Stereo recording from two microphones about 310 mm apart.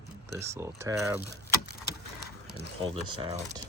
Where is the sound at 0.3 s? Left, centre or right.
Centre.